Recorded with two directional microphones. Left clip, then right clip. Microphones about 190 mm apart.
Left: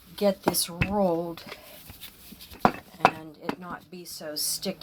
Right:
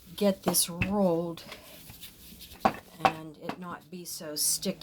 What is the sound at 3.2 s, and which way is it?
Speech, 55° right (ahead or behind).